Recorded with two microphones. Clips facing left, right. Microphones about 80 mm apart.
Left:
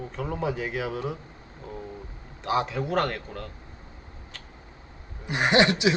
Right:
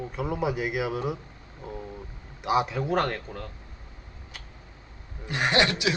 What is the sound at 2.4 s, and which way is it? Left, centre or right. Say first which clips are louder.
Speech: right 1 dB; centre.